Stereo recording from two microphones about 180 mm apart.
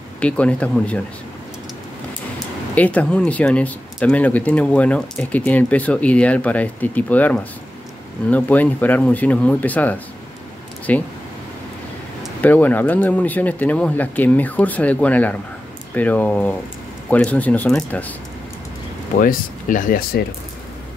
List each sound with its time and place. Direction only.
0.2 s speech: 5° left (ahead or behind)
2.7 s speech: 10° left (ahead or behind)
12.4 s speech: 10° left (ahead or behind)
19.1 s speech: 50° left (ahead or behind)